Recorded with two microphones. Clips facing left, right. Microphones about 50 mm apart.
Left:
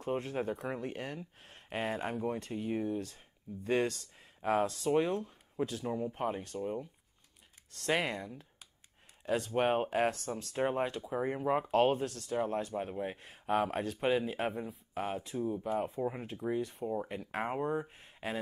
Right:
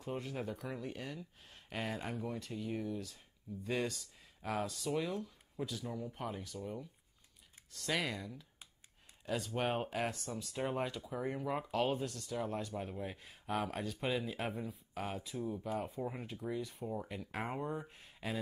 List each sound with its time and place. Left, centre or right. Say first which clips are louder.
0.0 s speech: left 6 dB; left
4.4 s speech: left 8 dB; left
10.1 s speech: left 4 dB; left
10.5 s speech: left 5 dB; left
11.7 s speech: left 6 dB; left
16.0 s speech: left 5 dB; centre
16.3 s speech: left 6 dB; left
16.8 s speech: left 6 dB; centre
17.1 s speech: left 5 dB; left
17.7 s speech: left 7 dB; centre